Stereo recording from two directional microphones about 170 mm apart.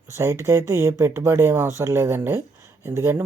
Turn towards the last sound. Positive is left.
turn(degrees=-15)  # may be behind; listen again after turning